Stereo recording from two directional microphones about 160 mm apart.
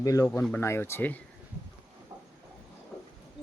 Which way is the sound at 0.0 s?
20° left (ahead or behind).